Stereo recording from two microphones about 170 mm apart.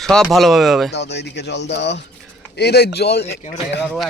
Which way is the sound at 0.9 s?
80° left.